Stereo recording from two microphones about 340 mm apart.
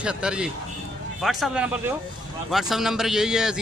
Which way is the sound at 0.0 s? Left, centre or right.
Centre.